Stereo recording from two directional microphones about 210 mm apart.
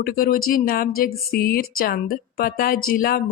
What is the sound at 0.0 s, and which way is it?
Speech, 45° left (ahead or behind).